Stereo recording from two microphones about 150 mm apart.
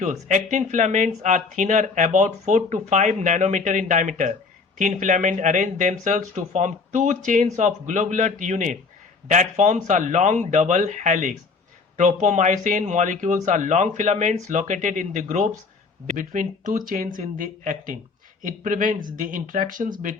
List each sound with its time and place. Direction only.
0.0 s speech: 50° right (ahead or behind)